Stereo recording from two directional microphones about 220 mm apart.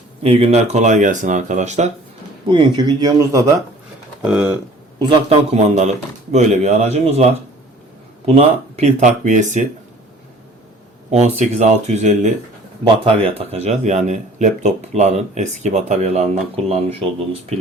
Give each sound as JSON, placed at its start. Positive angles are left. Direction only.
{"t": 0.2, "sound": "speech", "side_deg": -25}
{"t": 2.5, "sound": "speech", "side_deg": -20}
{"t": 4.2, "sound": "speech", "side_deg": -5}
{"t": 4.9, "sound": "speech", "side_deg": -25}
{"t": 8.7, "sound": "speech", "side_deg": -30}
{"t": 11.1, "sound": "speech", "side_deg": -30}